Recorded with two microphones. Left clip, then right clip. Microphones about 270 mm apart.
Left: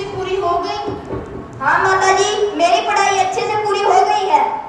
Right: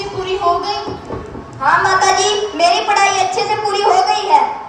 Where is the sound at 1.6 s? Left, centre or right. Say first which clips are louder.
Right 2 dB; right.